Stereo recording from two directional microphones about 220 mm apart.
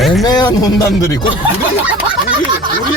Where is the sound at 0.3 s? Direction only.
15° left (ahead or behind).